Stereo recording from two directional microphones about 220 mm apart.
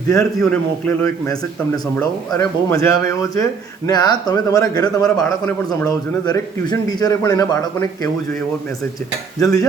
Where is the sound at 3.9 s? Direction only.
20° left (ahead or behind).